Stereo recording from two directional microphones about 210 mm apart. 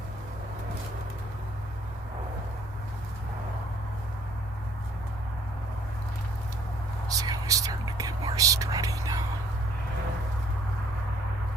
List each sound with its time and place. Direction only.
7.2 s whispering: 15° right (ahead or behind)